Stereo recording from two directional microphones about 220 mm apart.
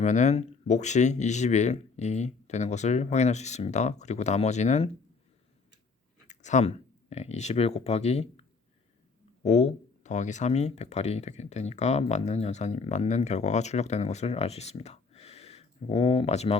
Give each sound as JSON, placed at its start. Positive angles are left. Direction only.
{"t": 0.0, "sound": "speech", "side_deg": 30}
{"t": 6.2, "sound": "speech", "side_deg": 30}